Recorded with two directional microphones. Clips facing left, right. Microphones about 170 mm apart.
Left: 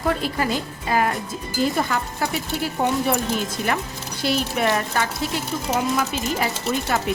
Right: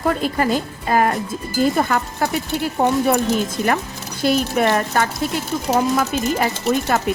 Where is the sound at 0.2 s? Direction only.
45° right (ahead or behind).